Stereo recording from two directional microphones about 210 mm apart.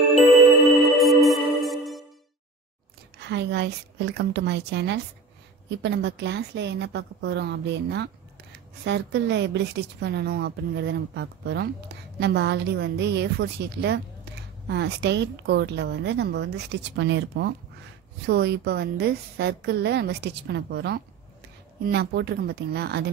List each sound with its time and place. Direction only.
0.9 s music: centre (ahead or behind)
3.3 s a woman's voice: 55° right (ahead or behind)